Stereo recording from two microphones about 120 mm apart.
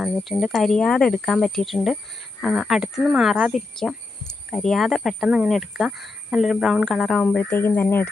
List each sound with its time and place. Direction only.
0.0 s speech: centre (ahead or behind)
7.5 s speech: 20° left (ahead or behind)